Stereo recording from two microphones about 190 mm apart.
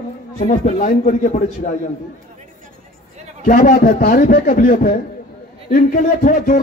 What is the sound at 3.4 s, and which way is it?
Speech, 45° left (ahead or behind).